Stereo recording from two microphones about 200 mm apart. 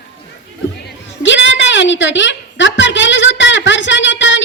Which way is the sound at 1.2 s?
65° left (ahead or behind).